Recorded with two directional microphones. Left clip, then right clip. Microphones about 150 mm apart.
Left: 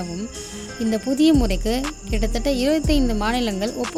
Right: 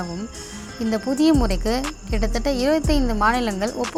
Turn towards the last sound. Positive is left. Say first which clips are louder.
# right 3 dB
turn(degrees=20)  # may be behind; listen again after turning